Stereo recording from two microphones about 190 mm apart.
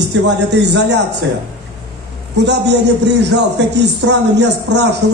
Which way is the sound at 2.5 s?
65° right (ahead or behind).